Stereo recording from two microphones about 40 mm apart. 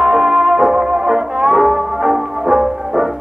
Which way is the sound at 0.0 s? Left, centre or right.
Centre.